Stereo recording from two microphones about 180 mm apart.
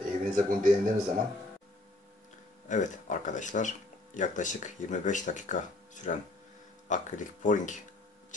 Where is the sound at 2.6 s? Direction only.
45° left (ahead or behind).